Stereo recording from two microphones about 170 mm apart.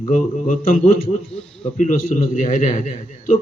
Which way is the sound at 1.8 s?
45° left (ahead or behind).